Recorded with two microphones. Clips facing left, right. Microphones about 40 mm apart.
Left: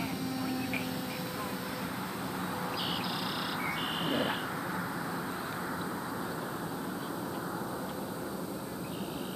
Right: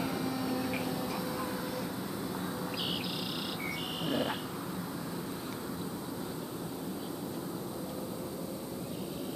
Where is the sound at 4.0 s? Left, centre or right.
Centre.